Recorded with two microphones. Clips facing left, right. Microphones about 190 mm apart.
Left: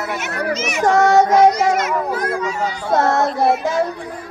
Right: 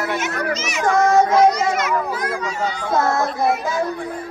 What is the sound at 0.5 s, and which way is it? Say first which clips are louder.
Speech: left 3 dB; 60° left (ahead or behind).